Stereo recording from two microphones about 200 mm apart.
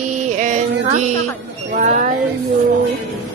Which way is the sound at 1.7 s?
40° right (ahead or behind).